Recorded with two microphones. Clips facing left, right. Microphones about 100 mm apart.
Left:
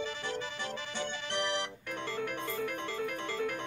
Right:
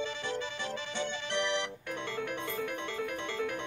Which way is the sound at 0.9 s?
35° left (ahead or behind).